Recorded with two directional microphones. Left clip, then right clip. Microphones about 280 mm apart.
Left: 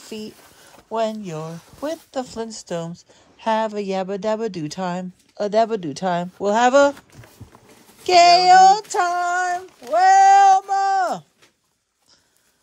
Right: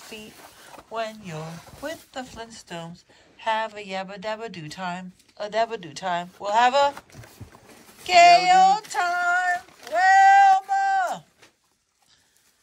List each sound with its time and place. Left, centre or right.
0.9 s a woman's voice: centre
8.0 s a woman's voice: left
9.9 s a sound: centre